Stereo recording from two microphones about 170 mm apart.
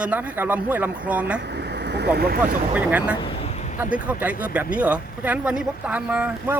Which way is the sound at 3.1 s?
35° left (ahead or behind).